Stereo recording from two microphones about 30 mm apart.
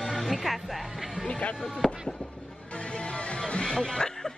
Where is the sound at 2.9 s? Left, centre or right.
Left.